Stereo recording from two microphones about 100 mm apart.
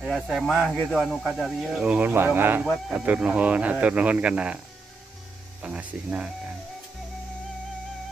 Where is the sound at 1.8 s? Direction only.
15° right (ahead or behind).